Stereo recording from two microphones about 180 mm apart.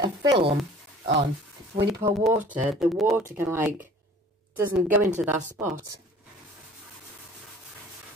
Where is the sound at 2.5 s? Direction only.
5° right (ahead or behind).